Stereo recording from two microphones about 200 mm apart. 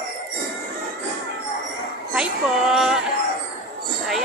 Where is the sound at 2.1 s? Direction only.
Centre (ahead or behind).